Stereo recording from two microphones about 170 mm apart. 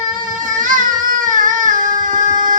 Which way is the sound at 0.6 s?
50° right (ahead or behind).